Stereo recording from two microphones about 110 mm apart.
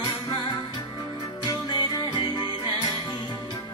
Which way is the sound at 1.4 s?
40° left (ahead or behind).